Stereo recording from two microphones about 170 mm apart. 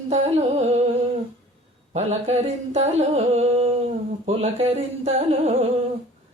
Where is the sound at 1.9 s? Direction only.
40° right (ahead or behind).